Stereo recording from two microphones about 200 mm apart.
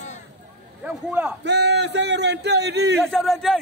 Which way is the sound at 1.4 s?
60° right (ahead or behind).